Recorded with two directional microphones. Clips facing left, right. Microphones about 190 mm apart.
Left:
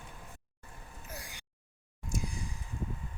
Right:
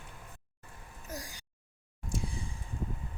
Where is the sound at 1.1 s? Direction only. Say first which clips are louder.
Right 5 dB; 40° right (ahead or behind).